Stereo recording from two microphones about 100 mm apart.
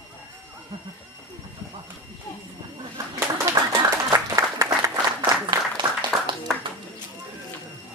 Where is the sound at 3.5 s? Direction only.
30° right (ahead or behind).